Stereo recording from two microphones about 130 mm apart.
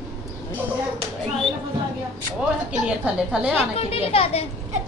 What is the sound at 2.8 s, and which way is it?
Speech, 10° right (ahead or behind).